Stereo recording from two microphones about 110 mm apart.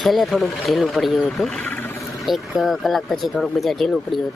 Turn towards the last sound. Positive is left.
turn(degrees=0)  # may be behind; listen again after turning